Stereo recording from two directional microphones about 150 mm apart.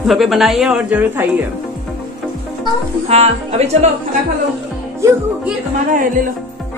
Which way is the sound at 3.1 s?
45° right (ahead or behind).